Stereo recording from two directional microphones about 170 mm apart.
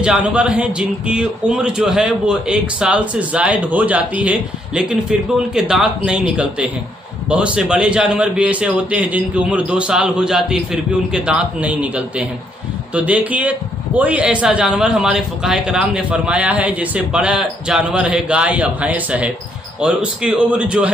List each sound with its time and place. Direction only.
0.0 s a man's voice: 5° right (ahead or behind)